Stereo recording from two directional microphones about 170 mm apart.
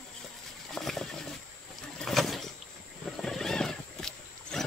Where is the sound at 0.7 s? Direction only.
Centre (ahead or behind).